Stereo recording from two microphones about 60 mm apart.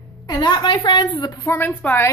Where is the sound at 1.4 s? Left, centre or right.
Left.